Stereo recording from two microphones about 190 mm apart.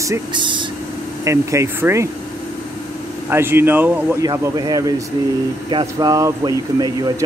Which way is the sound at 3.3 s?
10° right (ahead or behind).